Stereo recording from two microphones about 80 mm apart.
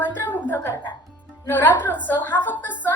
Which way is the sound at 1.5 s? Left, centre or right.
Left.